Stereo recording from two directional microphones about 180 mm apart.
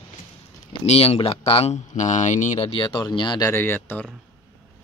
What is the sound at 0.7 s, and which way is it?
Speech, 35° left (ahead or behind).